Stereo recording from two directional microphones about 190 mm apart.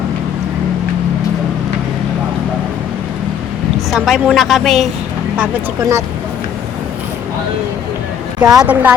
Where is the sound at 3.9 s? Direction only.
Centre (ahead or behind).